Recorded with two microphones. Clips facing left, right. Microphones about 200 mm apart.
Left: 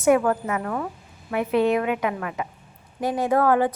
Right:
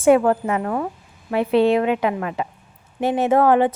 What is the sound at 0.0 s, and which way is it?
A woman's voice, 30° right (ahead or behind).